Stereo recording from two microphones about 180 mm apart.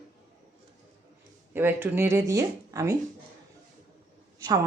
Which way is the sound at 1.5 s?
10° right (ahead or behind).